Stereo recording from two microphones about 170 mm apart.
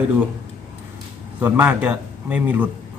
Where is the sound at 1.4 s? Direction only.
10° right (ahead or behind).